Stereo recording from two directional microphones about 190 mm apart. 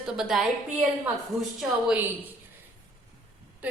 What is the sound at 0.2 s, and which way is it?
Speech, 5° right (ahead or behind).